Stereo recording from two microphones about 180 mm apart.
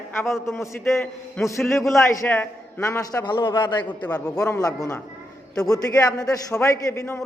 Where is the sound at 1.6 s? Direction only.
Centre (ahead or behind).